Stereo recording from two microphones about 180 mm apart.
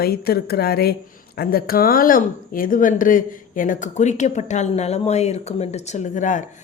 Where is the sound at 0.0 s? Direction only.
60° left (ahead or behind).